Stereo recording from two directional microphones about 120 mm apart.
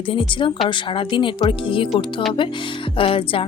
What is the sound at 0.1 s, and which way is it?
A woman's voice, 45° left (ahead or behind).